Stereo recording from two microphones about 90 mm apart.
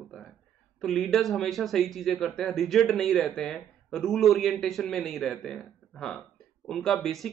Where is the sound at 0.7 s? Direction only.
5° left (ahead or behind).